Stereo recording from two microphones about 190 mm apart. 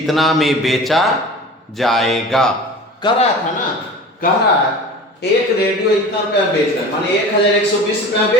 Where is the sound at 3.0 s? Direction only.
25° left (ahead or behind).